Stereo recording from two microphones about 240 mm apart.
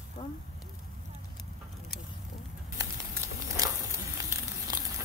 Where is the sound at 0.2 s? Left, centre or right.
Centre.